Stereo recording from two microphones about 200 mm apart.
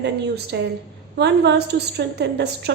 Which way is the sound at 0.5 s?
60° right (ahead or behind).